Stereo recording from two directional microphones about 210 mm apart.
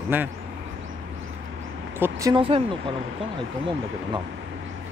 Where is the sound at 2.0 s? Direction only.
15° right (ahead or behind).